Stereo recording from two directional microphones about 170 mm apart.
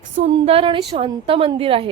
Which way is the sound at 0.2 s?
35° right (ahead or behind).